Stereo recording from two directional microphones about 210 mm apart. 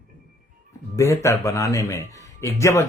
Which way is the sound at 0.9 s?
15° left (ahead or behind).